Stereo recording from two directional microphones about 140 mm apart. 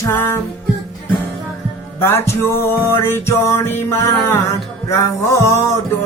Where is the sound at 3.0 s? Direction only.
20° left (ahead or behind).